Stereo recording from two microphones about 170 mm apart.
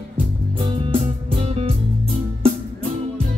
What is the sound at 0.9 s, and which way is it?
Music, 35° right (ahead or behind).